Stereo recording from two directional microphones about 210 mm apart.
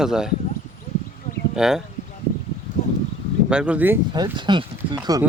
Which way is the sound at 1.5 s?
Centre (ahead or behind).